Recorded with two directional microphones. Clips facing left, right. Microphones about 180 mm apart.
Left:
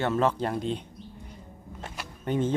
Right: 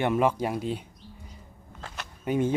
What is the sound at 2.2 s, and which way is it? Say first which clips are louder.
Speech: right 1 dB; 10° right (ahead or behind).